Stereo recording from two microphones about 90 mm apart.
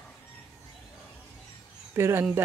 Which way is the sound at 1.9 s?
30° right (ahead or behind).